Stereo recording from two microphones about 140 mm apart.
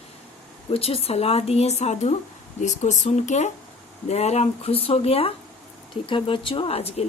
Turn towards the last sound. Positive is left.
turn(degrees=45)  # may be behind; listen again after turning